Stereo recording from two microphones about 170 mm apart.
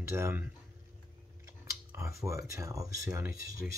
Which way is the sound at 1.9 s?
15° right (ahead or behind).